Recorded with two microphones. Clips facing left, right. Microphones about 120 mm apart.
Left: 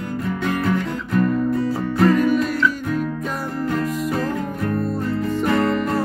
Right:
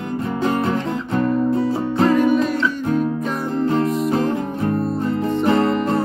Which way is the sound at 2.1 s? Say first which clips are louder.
Right 2 dB; centre (ahead or behind).